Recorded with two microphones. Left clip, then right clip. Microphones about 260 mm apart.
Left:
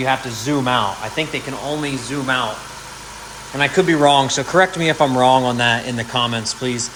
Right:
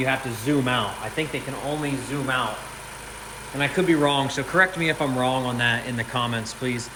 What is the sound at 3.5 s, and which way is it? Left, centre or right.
Speech, left.